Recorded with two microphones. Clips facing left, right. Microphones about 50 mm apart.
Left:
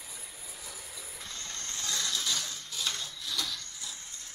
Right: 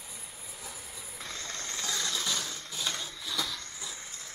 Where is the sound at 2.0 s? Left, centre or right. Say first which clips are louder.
Left 1 dB; centre.